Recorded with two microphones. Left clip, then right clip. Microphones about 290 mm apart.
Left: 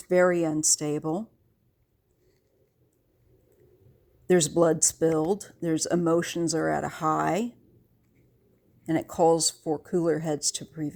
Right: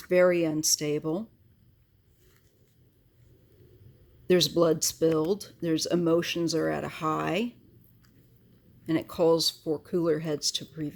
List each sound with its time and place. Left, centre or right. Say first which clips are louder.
0.1 s speech: even; left
4.3 s speech: left 1 dB; left
8.8 s speech: left 2 dB; left